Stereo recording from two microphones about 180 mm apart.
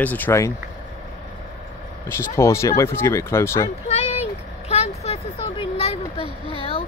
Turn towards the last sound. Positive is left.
turn(degrees=30)  # may be behind; listen again after turning